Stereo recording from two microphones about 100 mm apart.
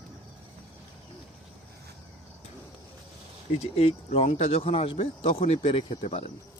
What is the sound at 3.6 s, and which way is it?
Speech, 90° left.